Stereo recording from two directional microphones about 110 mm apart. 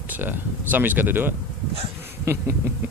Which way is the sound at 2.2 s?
25° right (ahead or behind).